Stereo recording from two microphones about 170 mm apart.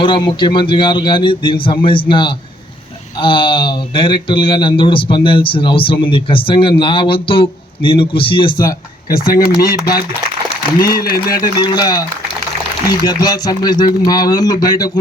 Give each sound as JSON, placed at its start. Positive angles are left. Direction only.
{"t": 0.0, "sound": "speech", "side_deg": 30}
{"t": 9.0, "sound": "speech", "side_deg": 60}
{"t": 11.6, "sound": "speech", "side_deg": 25}
{"t": 13.1, "sound": "speech", "side_deg": 25}